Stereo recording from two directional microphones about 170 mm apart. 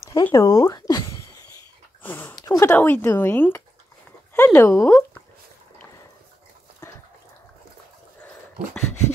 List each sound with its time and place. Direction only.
0.0 s speech: 20° left (ahead or behind)
2.0 s a sound: 15° left (ahead or behind)
2.7 s speech: 10° left (ahead or behind)